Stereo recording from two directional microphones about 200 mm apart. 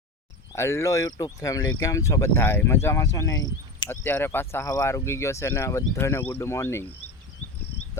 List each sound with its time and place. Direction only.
0.5 s speech: 15° left (ahead or behind)